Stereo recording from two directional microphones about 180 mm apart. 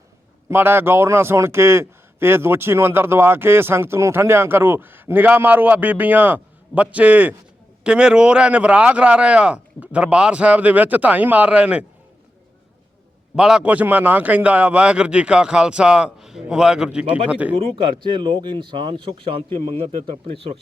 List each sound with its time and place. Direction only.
0.4 s a man's voice: 10° right (ahead or behind)
13.3 s a man's voice: 5° right (ahead or behind)
18.0 s speech: 25° right (ahead or behind)